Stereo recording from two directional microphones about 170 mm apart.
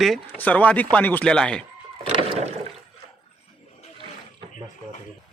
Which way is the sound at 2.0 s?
35° right (ahead or behind).